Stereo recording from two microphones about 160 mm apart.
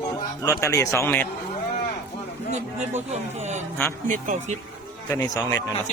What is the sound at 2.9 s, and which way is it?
A man's voice, 45° right (ahead or behind).